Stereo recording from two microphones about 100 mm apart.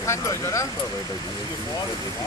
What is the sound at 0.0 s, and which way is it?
Speech, 30° left (ahead or behind).